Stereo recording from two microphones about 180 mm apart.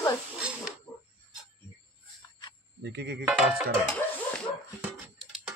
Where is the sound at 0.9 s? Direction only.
10° left (ahead or behind).